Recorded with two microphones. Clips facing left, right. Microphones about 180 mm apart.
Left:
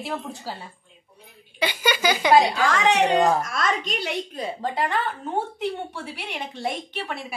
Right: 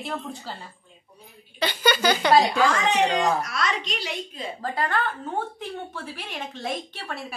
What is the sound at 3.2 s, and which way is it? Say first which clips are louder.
Speech: left 3 dB; 50° left (ahead or behind).